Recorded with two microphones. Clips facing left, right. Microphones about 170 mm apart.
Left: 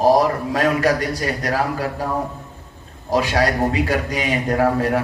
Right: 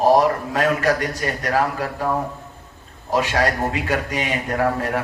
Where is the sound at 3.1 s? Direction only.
35° left (ahead or behind).